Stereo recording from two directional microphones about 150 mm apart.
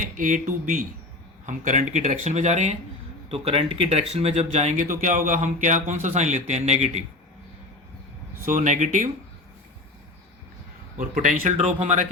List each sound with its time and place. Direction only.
0.0 s speech: 60° right (ahead or behind); by 4.9 s 45° right (ahead or behind)
4.9 s speech: 60° right (ahead or behind); by 7.0 s 45° right (ahead or behind)
8.4 s speech: 55° right (ahead or behind)
10.9 s speech: 55° right (ahead or behind)